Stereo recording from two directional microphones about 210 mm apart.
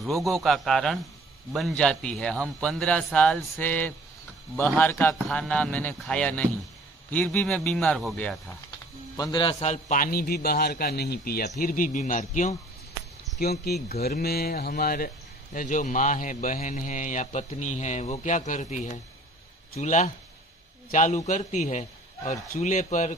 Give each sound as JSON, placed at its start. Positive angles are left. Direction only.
{"t": 0.2, "sound": "a man's voice", "side_deg": 0}
{"t": 9.1, "sound": "a man's voice", "side_deg": 20}
{"t": 13.4, "sound": "a man's voice", "side_deg": 50}